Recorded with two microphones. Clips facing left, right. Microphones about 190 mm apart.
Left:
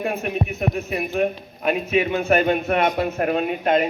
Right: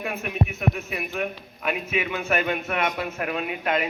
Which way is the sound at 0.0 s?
35° left (ahead or behind).